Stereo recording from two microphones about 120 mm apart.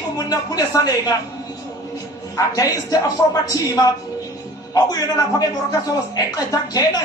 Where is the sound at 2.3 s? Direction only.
25° left (ahead or behind).